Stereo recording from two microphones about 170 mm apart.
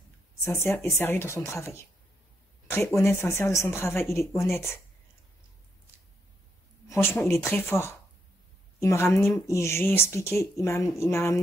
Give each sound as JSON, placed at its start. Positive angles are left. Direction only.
{"t": 0.4, "sound": "speech", "side_deg": 15}
{"t": 6.9, "sound": "a woman's voice", "side_deg": 15}